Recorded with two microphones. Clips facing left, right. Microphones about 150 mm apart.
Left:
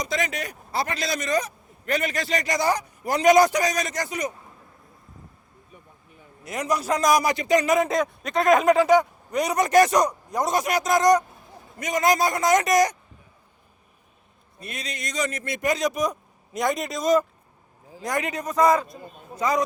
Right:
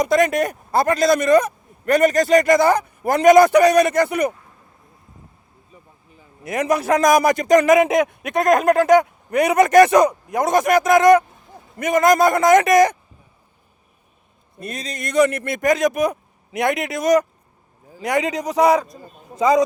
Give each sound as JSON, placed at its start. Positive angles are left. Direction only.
{"t": 0.0, "sound": "speech", "side_deg": -55}
{"t": 6.5, "sound": "speech", "side_deg": -55}
{"t": 7.7, "sound": "speech", "side_deg": -80}
{"t": 8.2, "sound": "a man's voice", "side_deg": -55}
{"t": 14.6, "sound": "a man's voice", "side_deg": -40}
{"t": 15.0, "sound": "a man's voice", "side_deg": -60}